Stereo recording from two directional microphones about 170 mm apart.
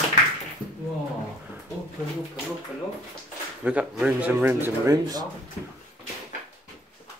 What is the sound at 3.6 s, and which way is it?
Speech, 10° right (ahead or behind).